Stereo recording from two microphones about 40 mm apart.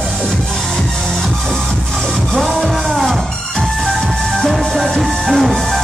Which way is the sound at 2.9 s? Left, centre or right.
Centre.